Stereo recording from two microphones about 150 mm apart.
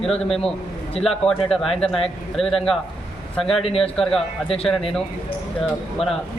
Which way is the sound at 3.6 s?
40° left (ahead or behind).